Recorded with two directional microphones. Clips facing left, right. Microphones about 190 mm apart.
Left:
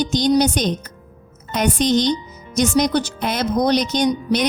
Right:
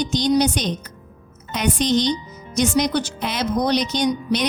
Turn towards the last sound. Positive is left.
turn(degrees=45)  # may be behind; listen again after turning